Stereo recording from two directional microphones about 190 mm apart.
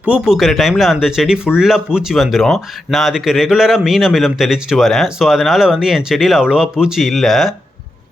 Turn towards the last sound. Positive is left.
turn(degrees=0)  # may be behind; listen again after turning